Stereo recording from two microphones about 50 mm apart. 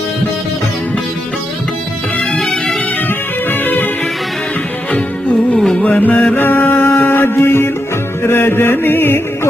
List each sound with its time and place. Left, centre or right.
2.3 s music: centre
3.5 s music: left
5.8 s music: left